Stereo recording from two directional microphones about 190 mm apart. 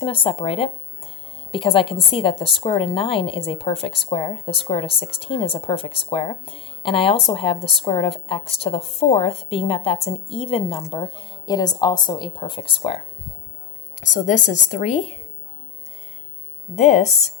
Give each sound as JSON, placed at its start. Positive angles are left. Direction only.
{"t": 0.0, "sound": "a woman's voice", "side_deg": 30}
{"t": 14.0, "sound": "a woman's voice", "side_deg": 40}
{"t": 16.7, "sound": "a woman's voice", "side_deg": 35}